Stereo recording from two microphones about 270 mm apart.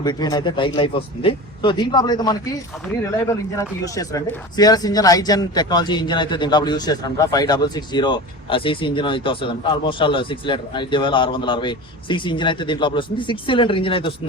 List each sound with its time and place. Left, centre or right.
0.0 s speech: centre
3.6 s speech: centre